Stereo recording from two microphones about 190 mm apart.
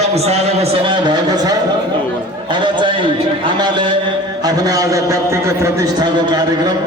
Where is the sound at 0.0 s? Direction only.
35° right (ahead or behind).